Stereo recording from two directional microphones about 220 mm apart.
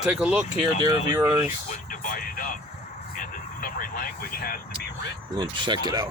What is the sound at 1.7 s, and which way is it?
Music, 40° left (ahead or behind).